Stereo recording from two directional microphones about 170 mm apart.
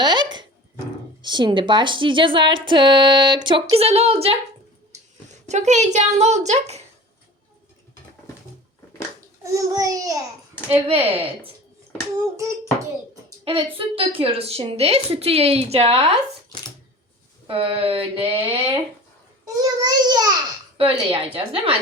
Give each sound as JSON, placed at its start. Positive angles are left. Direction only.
{"t": 0.0, "sound": "dog", "side_deg": -25}
{"t": 1.2, "sound": "speech", "side_deg": -25}
{"t": 5.5, "sound": "a woman's voice", "side_deg": -40}
{"t": 9.4, "sound": "speech", "side_deg": -20}
{"t": 10.7, "sound": "a woman's voice", "side_deg": -35}
{"t": 13.4, "sound": "a woman's voice", "side_deg": -35}
{"t": 17.4, "sound": "a woman's voice", "side_deg": -30}